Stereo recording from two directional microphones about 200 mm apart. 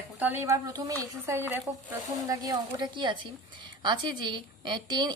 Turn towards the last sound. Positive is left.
turn(degrees=-20)  # may be behind; listen again after turning